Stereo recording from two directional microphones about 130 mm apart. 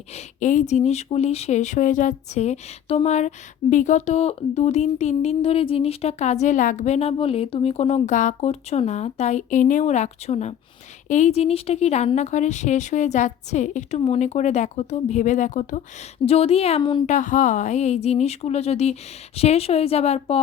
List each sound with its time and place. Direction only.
0.1 s a woman's voice: 65° left (ahead or behind)
14.0 s speech: 55° left (ahead or behind)
16.2 s a woman's voice: 50° left (ahead or behind)
17.1 s a woman's voice: 80° left; by 20.4 s 55° left (ahead or behind)